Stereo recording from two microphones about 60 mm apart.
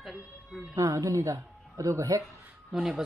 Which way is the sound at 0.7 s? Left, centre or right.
Right.